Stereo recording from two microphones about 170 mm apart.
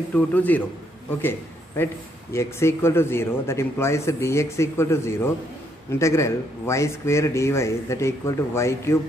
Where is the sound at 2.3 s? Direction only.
15° left (ahead or behind).